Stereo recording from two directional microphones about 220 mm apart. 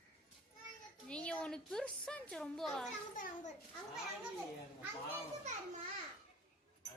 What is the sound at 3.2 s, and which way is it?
Speech, 35° left (ahead or behind).